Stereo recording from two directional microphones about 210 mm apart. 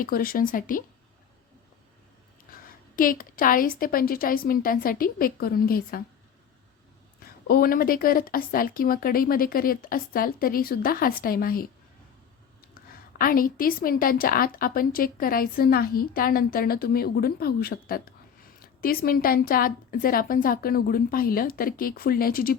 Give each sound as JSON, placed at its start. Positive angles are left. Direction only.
{"t": 0.0, "sound": "speech", "side_deg": 45}
{"t": 2.5, "sound": "a woman's voice", "side_deg": 40}
{"t": 7.4, "sound": "a woman's voice", "side_deg": 45}
{"t": 12.7, "sound": "a woman's voice", "side_deg": 45}